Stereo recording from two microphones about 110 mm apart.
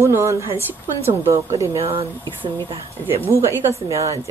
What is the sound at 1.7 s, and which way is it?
Speech, 60° right (ahead or behind).